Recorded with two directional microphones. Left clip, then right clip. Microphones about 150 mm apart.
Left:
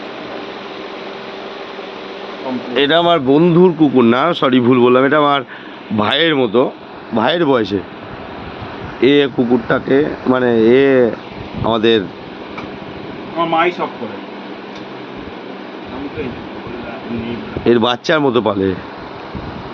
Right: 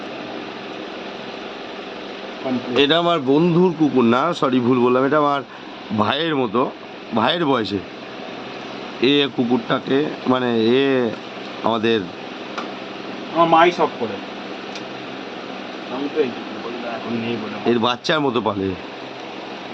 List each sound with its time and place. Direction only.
2.7 s speech: 20° left (ahead or behind)
9.0 s speech: 5° left (ahead or behind)
13.4 s speech: 25° right (ahead or behind)
17.7 s speech: 20° left (ahead or behind)